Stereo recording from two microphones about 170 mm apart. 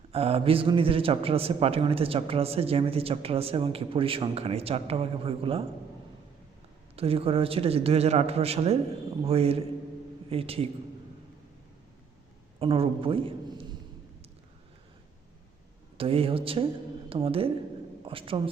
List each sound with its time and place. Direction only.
0.1 s a man's voice: 35° right (ahead or behind)
6.9 s a man's voice: 35° right (ahead or behind)
12.5 s a man's voice: 35° right (ahead or behind)
16.0 s a man's voice: 35° right (ahead or behind)